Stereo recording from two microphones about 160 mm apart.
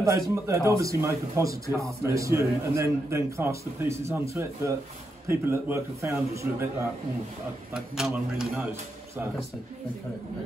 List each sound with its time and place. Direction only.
0.0 s a man's voice: 20° right (ahead or behind)
7.7 s a man's voice: 5° right (ahead or behind)